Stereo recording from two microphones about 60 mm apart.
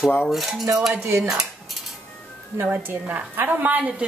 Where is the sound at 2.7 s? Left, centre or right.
Right.